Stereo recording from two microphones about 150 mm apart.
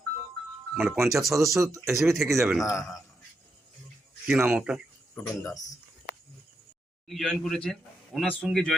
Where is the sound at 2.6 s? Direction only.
20° left (ahead or behind).